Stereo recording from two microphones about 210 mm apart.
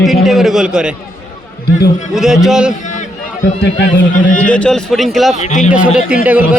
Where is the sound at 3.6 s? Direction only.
55° left (ahead or behind).